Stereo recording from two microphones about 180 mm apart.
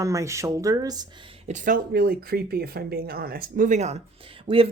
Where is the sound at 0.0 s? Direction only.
15° right (ahead or behind).